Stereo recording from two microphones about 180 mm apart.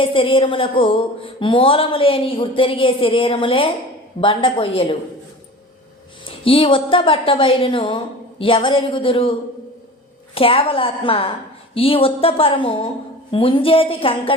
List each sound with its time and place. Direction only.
0.0 s speech: 30° left (ahead or behind)
6.2 s speech: 30° left (ahead or behind)
10.3 s speech: 30° left (ahead or behind)